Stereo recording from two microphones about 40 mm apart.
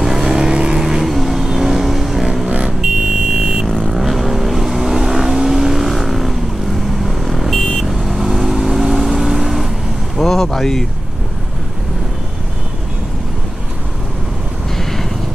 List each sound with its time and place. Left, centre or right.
0.0 s vehicle: centre
0.8 s vehicle: centre
2.8 s buzzer: centre
3.9 s vehicle: centre
10.1 s vehicle: centre
14.8 s a sound: centre